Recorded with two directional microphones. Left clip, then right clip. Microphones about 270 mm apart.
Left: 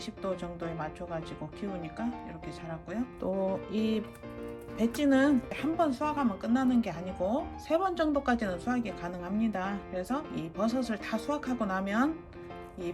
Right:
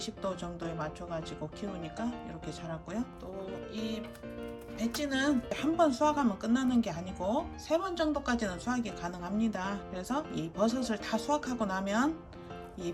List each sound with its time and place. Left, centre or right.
0.0 s speech: centre
3.7 s music: centre
4.8 s speech: centre